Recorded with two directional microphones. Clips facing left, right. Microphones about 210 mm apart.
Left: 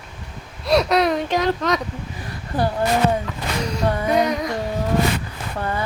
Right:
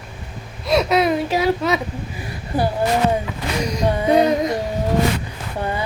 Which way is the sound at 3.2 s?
15° right (ahead or behind).